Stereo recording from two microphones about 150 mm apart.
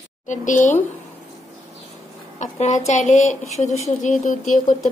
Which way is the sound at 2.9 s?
50° left (ahead or behind).